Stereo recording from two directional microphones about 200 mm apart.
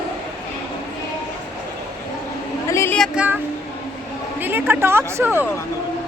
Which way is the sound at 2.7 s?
10° left (ahead or behind).